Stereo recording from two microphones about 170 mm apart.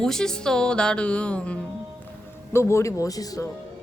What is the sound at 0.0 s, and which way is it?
A woman's voice, 5° left (ahead or behind).